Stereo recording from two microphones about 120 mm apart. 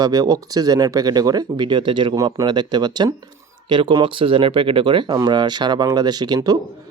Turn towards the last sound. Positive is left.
turn(degrees=-35)  # may be behind; listen again after turning